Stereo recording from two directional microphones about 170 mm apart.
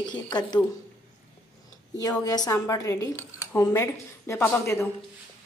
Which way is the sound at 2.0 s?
20° left (ahead or behind).